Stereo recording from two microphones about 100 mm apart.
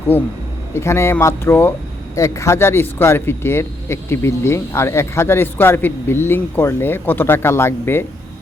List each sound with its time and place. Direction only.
0.7 s speech: 25° left (ahead or behind)